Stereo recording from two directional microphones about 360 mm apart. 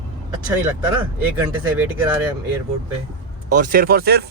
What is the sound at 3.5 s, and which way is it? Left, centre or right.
Speech, right.